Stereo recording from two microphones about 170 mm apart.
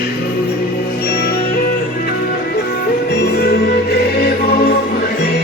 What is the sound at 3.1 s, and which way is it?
Music, 75° left (ahead or behind).